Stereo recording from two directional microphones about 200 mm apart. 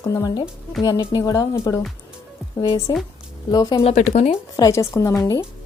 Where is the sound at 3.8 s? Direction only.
35° left (ahead or behind).